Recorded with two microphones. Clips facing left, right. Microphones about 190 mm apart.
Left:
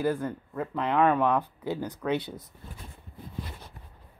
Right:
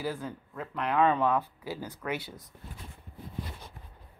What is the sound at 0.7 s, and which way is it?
Speech, 20° left (ahead or behind).